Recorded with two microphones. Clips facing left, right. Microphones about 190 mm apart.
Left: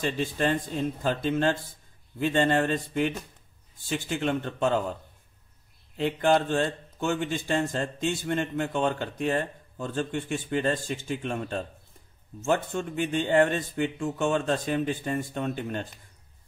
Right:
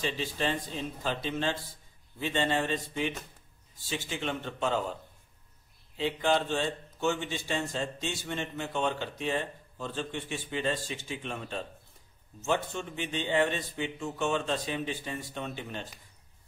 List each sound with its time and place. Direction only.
0.0 s speech: 50° left (ahead or behind)
5.9 s speech: 50° left (ahead or behind)